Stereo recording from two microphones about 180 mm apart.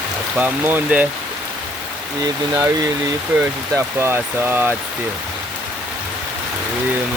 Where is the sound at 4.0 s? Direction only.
10° right (ahead or behind).